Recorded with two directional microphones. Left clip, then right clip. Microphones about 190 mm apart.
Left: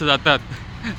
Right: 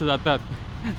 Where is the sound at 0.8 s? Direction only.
10° right (ahead or behind).